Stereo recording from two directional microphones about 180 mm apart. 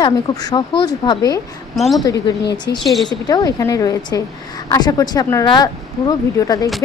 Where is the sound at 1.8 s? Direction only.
Centre (ahead or behind).